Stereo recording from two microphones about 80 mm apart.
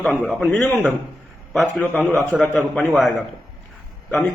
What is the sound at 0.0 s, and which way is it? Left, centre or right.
Speech, centre.